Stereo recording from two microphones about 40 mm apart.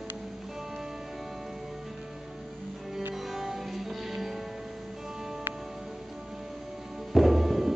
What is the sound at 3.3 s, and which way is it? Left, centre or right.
Music, centre.